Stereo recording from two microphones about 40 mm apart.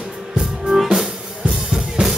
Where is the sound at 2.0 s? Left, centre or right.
Centre.